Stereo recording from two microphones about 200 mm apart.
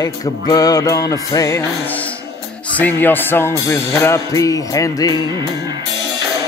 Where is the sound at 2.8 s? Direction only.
10° left (ahead or behind).